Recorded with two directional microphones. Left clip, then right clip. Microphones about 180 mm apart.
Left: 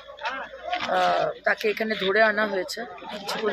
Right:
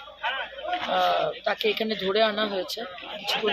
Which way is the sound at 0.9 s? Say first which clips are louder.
Left 1 dB; 10° left (ahead or behind).